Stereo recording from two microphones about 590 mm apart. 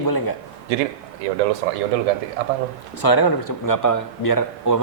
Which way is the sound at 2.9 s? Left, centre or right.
Left.